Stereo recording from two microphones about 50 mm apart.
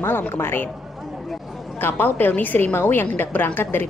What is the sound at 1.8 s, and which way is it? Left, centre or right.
A woman's voice, left.